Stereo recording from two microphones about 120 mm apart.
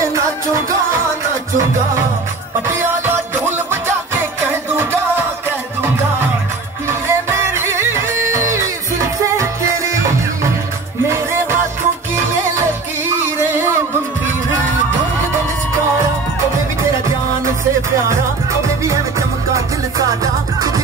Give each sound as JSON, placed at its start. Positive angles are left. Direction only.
{"t": 0.0, "sound": "music", "side_deg": -25}
{"t": 3.4, "sound": "music", "side_deg": -20}
{"t": 6.9, "sound": "music", "side_deg": -20}
{"t": 18.9, "sound": "music", "side_deg": -25}